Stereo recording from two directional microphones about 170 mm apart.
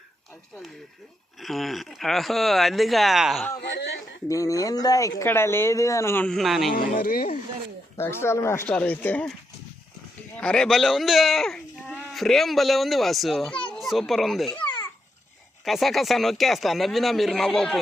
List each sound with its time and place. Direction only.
1.4 s speech: centre (ahead or behind)
3.6 s a man's voice: 85° left
4.3 s speech: 20° left (ahead or behind); by 6.7 s centre (ahead or behind)
6.7 s speech: 60° left (ahead or behind)
7.9 s speech: 15° left (ahead or behind)
10.3 s a child's voice: 5° left (ahead or behind)
15.6 s speech: centre (ahead or behind)